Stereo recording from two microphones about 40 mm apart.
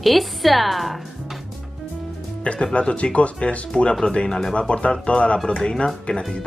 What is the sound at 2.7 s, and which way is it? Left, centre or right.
Speech, left.